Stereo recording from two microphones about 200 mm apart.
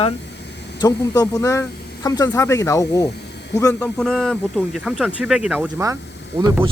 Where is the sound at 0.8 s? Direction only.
20° left (ahead or behind).